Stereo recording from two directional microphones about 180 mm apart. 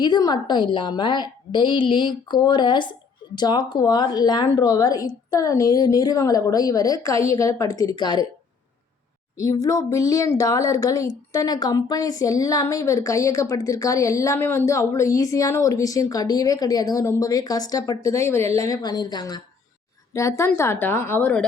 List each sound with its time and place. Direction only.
0.0 s speech: 25° left (ahead or behind)
9.4 s a woman's voice: 20° left (ahead or behind)